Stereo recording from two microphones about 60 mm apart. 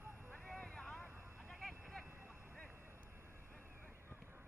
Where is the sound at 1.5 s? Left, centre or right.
Centre.